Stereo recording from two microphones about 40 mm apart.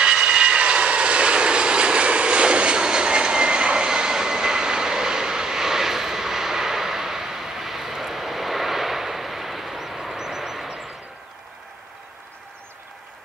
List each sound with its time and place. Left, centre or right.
0.0 s vehicle: right; by 10.7 s centre